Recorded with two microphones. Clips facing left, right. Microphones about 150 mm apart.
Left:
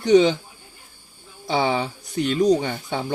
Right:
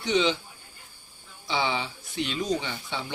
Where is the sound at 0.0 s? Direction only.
45° left (ahead or behind).